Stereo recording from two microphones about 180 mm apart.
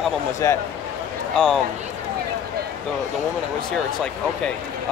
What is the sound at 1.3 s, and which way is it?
Speech, 5° left (ahead or behind).